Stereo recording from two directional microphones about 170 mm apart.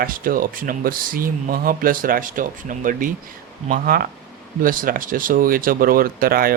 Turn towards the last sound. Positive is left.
turn(degrees=-60)  # may be behind; listen again after turning